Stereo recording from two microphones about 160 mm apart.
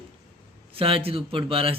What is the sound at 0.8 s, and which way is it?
Speech, 35° right (ahead or behind).